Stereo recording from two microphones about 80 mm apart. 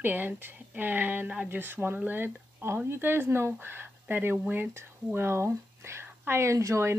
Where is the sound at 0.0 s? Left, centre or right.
Right.